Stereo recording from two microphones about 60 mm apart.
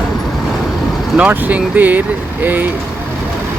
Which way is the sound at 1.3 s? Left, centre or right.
Right.